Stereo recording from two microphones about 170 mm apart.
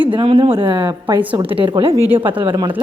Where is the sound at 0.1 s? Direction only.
35° right (ahead or behind).